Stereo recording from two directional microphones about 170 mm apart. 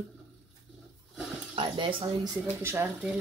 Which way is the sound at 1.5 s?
30° right (ahead or behind).